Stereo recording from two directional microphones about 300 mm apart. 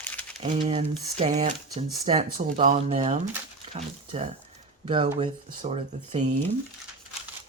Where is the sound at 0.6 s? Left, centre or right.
Centre.